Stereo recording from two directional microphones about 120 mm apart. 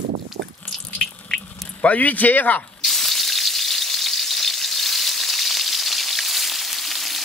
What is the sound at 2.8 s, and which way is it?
Frying, centre (ahead or behind).